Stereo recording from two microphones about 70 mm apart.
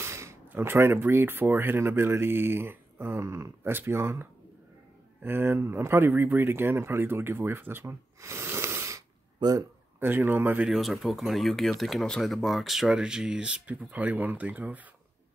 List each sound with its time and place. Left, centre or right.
0.0 s a sound: right
0.5 s speech: right
9.4 s speech: right
9.9 s speech: right
10.7 s speech: centre; by 14.9 s right